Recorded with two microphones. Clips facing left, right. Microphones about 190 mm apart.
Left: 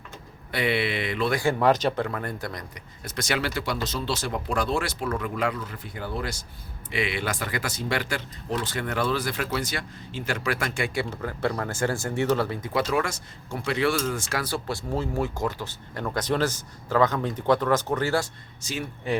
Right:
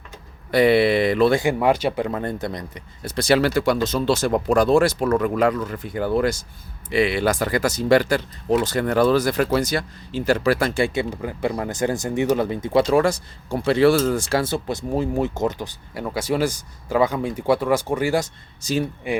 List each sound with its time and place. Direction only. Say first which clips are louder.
0.5 s speech: right 10 dB; 40° right (ahead or behind)
1.4 s speech: right 2 dB; 15° right (ahead or behind)
2.0 s speech: right 6 dB; 25° right (ahead or behind)
3.5 s speech: right 9 dB; 50° right (ahead or behind)
6.9 s speech: right 9 dB; 40° right (ahead or behind)
11.1 s speech: right 3 dB; 15° right (ahead or behind)
18.6 s speech: right 9 dB; 35° right (ahead or behind)